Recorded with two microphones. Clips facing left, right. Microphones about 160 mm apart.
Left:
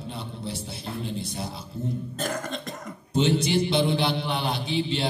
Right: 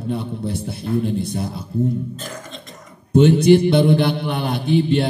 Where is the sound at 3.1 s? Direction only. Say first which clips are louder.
Right 10 dB; 55° right (ahead or behind).